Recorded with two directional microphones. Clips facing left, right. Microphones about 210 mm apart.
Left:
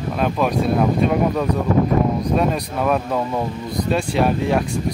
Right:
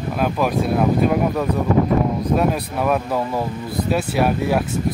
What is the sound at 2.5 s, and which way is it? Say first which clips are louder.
Speech: even; 5° right (ahead or behind).